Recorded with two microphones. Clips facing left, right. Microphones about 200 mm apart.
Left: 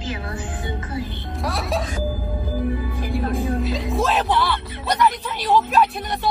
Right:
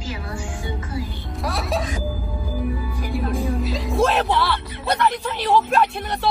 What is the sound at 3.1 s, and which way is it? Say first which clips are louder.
Music: left 1 dB; centre (ahead or behind).